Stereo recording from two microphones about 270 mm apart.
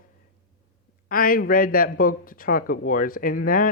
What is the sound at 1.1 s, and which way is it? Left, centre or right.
A man's voice, left.